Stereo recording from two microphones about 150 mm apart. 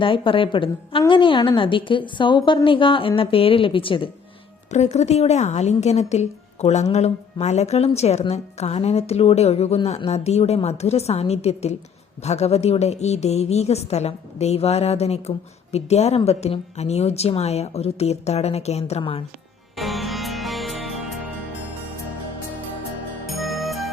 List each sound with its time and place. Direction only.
0.0 s a woman's voice: 35° left (ahead or behind)
4.7 s speech: 50° left (ahead or behind)
19.7 s music: centre (ahead or behind)
23.2 s music: centre (ahead or behind)